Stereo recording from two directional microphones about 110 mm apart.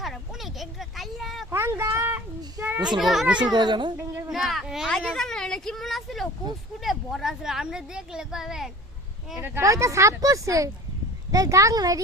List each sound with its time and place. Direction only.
0.0 s a sound: centre (ahead or behind)
1.5 s a sound: 25° right (ahead or behind)
2.6 s children playing: 25° right (ahead or behind)
3.0 s speech: centre (ahead or behind)
3.3 s a child's voice: 40° right (ahead or behind)
4.3 s speech: centre (ahead or behind)
9.4 s speech: 25° right (ahead or behind)